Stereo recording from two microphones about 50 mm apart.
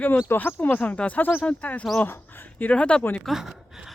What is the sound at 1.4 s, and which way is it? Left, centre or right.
Speech, left.